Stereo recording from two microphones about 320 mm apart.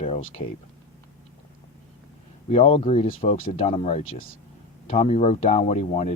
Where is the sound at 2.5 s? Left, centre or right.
Centre.